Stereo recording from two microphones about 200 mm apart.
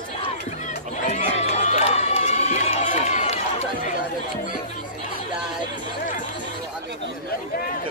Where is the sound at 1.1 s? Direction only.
35° left (ahead or behind).